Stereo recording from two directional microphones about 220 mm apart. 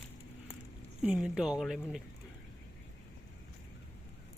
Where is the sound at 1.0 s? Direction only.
5° right (ahead or behind).